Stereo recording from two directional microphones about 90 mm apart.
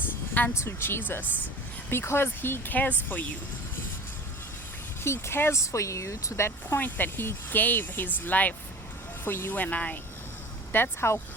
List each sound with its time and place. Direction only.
0.3 s speech: 25° left (ahead or behind)
5.0 s speech: 30° left (ahead or behind)